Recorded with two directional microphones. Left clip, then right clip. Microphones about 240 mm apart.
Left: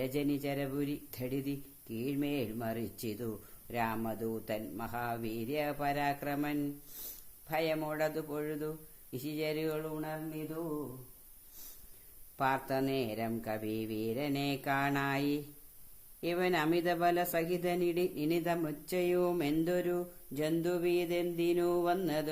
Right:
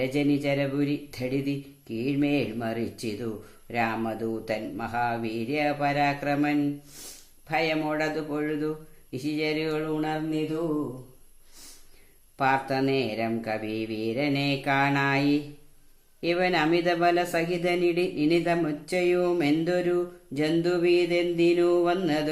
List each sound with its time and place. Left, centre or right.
0.0 s speech: left
12.4 s speech: left